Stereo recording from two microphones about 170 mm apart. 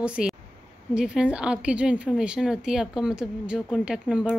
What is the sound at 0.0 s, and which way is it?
A woman's voice, 5° right (ahead or behind).